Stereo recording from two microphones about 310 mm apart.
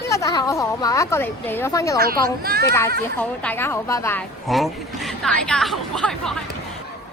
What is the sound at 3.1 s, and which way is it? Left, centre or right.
Speech, centre.